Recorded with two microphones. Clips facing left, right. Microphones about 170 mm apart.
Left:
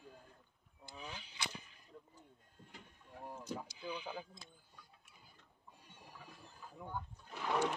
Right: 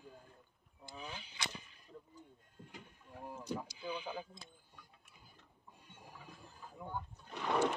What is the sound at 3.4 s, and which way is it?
Rowboat, 10° right (ahead or behind).